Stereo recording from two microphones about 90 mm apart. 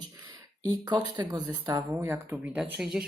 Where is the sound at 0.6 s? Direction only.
50° right (ahead or behind).